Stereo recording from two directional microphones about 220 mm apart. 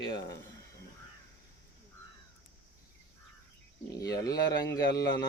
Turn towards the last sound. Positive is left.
turn(degrees=15)  # may be behind; listen again after turning